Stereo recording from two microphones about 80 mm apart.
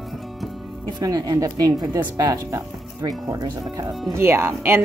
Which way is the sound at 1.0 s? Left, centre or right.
Right.